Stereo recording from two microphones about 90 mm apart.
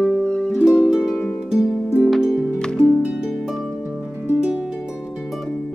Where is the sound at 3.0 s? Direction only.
10° right (ahead or behind).